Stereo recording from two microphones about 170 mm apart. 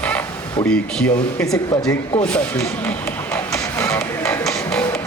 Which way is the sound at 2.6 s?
10° left (ahead or behind).